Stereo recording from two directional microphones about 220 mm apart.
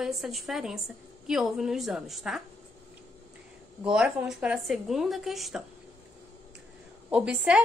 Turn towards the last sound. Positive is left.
turn(degrees=-5)  # may be behind; listen again after turning